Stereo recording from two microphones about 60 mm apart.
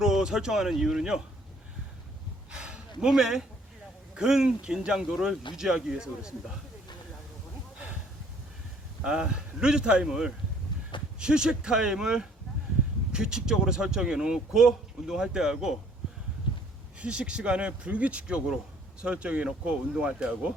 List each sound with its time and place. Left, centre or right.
0.0 s speech: centre
2.5 s a sound: centre
4.1 s speech: centre
9.0 s speech: centre
17.0 s speech: centre